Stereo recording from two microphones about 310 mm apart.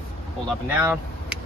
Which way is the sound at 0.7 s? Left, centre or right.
Centre.